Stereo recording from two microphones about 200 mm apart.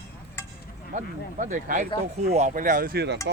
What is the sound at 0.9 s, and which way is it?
Speech, 40° right (ahead or behind).